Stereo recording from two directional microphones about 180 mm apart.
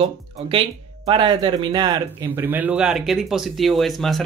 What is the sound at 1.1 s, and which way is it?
Speech, 30° right (ahead or behind).